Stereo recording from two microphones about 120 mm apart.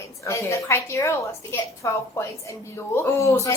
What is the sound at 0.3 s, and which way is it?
A woman's voice, 25° left (ahead or behind).